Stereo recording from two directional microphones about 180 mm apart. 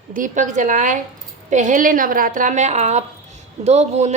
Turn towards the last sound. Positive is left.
turn(degrees=-40)  # may be behind; listen again after turning